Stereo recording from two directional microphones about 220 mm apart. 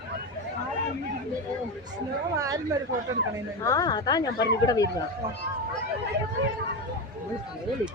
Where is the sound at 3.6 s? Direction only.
15° left (ahead or behind).